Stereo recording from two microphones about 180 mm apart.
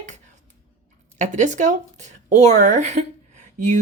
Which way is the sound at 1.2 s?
45° right (ahead or behind).